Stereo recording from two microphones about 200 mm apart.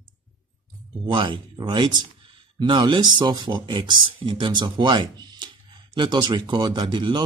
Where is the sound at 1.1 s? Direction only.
25° right (ahead or behind).